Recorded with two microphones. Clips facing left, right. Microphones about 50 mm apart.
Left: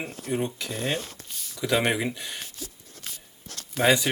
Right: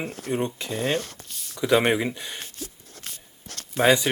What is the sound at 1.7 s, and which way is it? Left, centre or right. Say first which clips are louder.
Speech: right 4 dB; centre.